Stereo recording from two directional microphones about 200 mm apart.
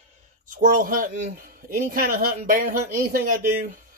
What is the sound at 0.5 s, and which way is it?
Speech, 45° right (ahead or behind).